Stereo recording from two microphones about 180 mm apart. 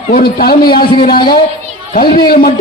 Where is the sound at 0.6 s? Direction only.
25° left (ahead or behind).